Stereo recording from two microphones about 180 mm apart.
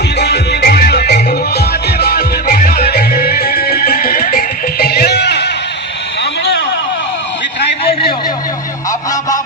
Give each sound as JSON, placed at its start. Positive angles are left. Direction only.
{"t": 0.2, "sound": "music", "side_deg": 65}